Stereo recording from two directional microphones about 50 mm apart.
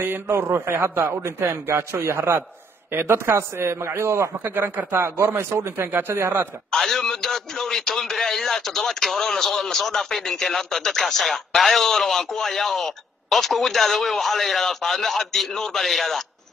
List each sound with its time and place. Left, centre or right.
0.0 s a man's voice: right
0.7 s a man's voice: right
4.4 s a man's voice: right
5.0 s a man's voice: right
5.9 s a man's voice: right
6.7 s a man's voice: centre